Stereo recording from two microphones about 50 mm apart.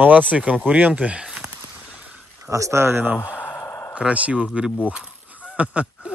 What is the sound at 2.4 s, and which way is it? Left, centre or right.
Speech, right.